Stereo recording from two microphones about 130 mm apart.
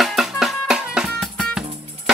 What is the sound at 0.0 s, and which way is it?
Music, centre (ahead or behind).